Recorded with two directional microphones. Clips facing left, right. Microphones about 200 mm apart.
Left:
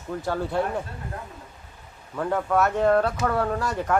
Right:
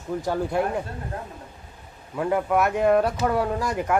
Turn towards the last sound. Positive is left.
turn(degrees=-10)  # may be behind; listen again after turning